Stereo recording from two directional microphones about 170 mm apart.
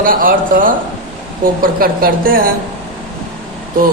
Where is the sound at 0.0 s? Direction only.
55° right (ahead or behind).